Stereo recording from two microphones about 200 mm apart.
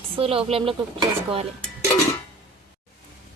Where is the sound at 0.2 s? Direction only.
30° right (ahead or behind).